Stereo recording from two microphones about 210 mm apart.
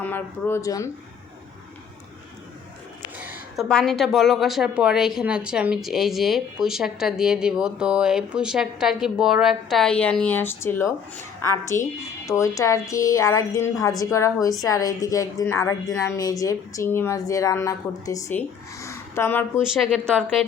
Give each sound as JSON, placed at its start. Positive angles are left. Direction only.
{"t": 0.0, "sound": "a woman's voice", "side_deg": 10}
{"t": 3.2, "sound": "a woman's voice", "side_deg": -5}
{"t": 19.7, "sound": "a woman's voice", "side_deg": 0}